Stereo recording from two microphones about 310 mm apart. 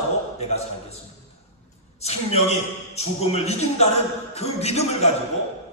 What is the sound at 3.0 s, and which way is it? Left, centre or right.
A man's voice, centre.